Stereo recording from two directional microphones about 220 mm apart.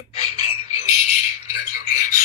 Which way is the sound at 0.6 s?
15° right (ahead or behind).